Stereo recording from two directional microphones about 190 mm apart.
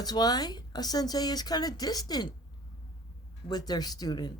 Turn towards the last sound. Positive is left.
turn(degrees=20)  # may be behind; listen again after turning